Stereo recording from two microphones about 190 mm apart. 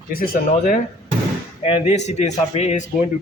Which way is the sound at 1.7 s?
35° left (ahead or behind).